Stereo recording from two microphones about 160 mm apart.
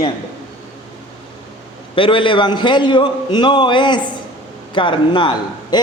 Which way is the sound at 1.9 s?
35° left (ahead or behind).